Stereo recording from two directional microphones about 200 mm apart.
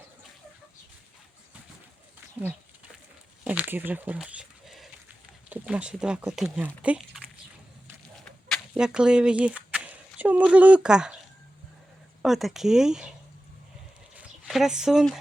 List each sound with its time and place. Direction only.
3.4 s speech: 5° right (ahead or behind)
8.2 s a sound: 5° left (ahead or behind)
12.2 s speech: centre (ahead or behind)
14.2 s speech: 5° right (ahead or behind)